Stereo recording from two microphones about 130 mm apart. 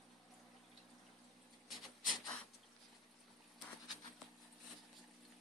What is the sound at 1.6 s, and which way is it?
Rub, centre (ahead or behind).